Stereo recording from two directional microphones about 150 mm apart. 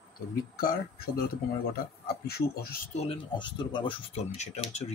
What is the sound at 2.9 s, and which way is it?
Speech, 45° left (ahead or behind).